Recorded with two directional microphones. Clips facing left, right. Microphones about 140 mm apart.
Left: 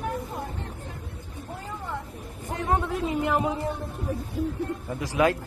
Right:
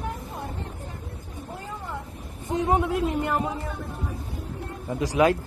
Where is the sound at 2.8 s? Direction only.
Centre (ahead or behind).